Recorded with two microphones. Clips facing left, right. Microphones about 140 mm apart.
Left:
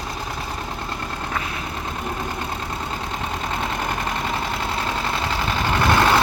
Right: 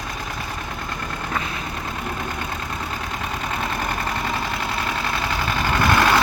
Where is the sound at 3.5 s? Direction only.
20° left (ahead or behind).